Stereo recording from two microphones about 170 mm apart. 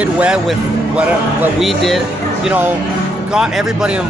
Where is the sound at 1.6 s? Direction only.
Centre (ahead or behind).